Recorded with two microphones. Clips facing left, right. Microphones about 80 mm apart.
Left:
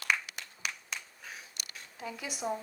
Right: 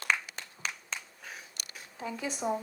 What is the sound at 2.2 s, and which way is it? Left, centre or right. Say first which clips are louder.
Speech: right 5 dB; right.